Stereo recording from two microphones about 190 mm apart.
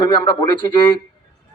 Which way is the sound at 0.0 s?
25° left (ahead or behind).